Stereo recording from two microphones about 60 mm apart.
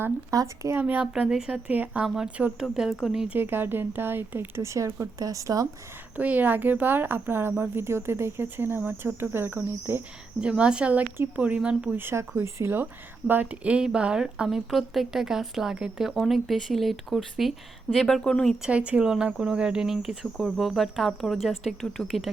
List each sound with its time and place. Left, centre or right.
0.3 s speech: right
0.8 s a woman's voice: right
1.3 s a woman's voice: centre
2.6 s speech: centre
3.3 s speech: right
5.2 s speech: right
6.1 s speech: right
10.4 s a woman's voice: centre
11.9 s speech: right
12.8 s speech: right; by 14.6 s centre
14.7 s a woman's voice: centre
18.7 s speech: centre